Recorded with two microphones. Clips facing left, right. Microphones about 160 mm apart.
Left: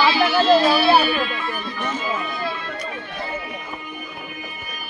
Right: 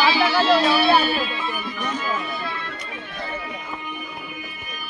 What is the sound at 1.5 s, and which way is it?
Music, 10° right (ahead or behind).